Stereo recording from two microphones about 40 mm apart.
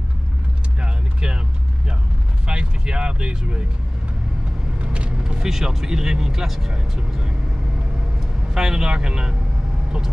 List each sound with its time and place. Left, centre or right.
0.7 s vehicle: right
2.4 s speech: right
5.2 s speech: centre
8.5 s speech: centre